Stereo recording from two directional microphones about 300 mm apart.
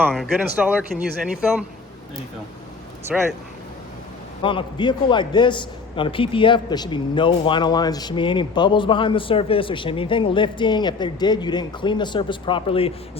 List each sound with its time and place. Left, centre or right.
0.0 s speech: centre
3.1 s speech: centre
4.4 s a man's voice: centre